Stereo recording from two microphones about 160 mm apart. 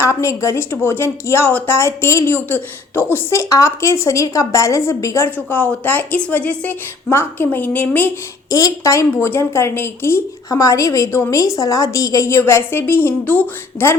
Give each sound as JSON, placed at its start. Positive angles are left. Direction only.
{"t": 0.0, "sound": "speech", "side_deg": 20}